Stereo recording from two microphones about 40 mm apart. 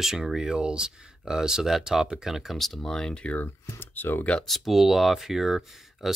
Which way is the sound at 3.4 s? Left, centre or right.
Left.